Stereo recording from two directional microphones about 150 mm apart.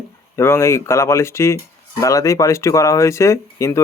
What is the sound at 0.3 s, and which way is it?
Speech, 15° left (ahead or behind).